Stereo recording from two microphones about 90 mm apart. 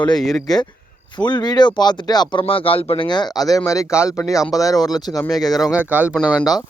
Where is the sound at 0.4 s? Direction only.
50° left (ahead or behind).